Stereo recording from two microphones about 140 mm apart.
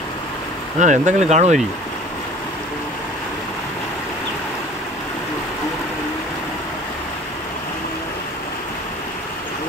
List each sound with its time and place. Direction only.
0.7 s speech: 60° right (ahead or behind)